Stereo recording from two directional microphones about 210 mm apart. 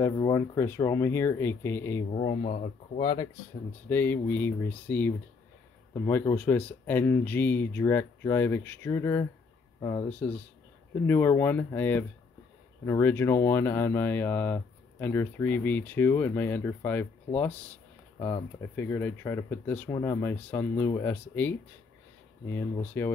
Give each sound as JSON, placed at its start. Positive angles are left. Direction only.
{"t": 0.0, "sound": "speech", "side_deg": 15}
{"t": 2.1, "sound": "speech", "side_deg": 30}
{"t": 3.0, "sound": "speech", "side_deg": 20}
{"t": 3.9, "sound": "speech", "side_deg": 10}
{"t": 11.1, "sound": "speech", "side_deg": 10}
{"t": 23.0, "sound": "speech", "side_deg": 10}